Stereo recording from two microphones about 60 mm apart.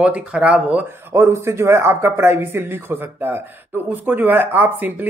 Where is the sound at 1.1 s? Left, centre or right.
Right.